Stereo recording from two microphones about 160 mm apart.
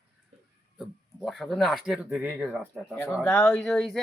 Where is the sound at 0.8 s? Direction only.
Centre (ahead or behind).